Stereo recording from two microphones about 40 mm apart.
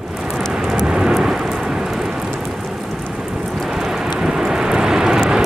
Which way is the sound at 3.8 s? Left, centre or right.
Centre.